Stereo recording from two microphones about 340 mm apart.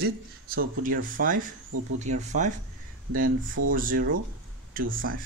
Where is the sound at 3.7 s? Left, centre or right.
Right.